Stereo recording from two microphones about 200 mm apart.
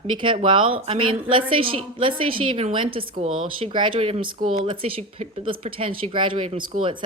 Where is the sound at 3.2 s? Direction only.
90° right.